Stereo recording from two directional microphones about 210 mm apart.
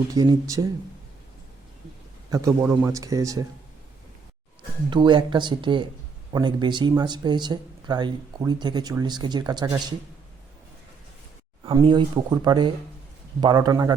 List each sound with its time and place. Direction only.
0.1 s speech: 15° right (ahead or behind)
2.3 s speech: 15° right (ahead or behind)
4.9 s speech: 20° right (ahead or behind)
11.6 s speech: 25° right (ahead or behind)